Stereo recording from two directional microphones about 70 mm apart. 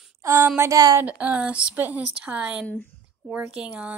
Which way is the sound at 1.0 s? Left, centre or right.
Right.